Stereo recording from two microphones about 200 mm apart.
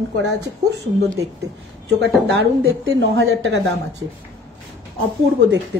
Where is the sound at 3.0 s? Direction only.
70° right (ahead or behind).